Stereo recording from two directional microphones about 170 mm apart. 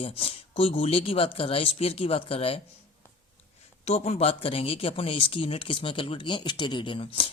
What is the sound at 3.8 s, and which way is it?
Speech, 40° left (ahead or behind).